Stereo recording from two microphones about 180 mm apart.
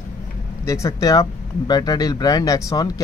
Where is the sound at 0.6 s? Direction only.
15° left (ahead or behind).